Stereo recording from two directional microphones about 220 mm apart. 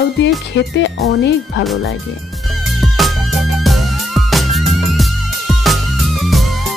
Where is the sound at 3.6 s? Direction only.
Centre (ahead or behind).